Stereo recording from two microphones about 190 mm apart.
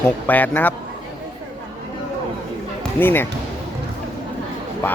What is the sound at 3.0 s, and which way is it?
Speech, 10° left (ahead or behind).